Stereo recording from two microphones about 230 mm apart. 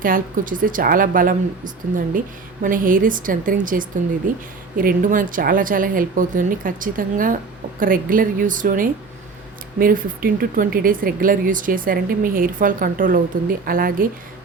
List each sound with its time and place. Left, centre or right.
0.0 s speech: right